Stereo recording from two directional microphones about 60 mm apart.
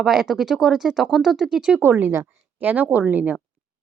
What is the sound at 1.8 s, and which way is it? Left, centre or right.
Speech, right.